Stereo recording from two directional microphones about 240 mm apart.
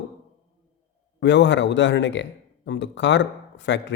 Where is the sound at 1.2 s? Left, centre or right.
Left.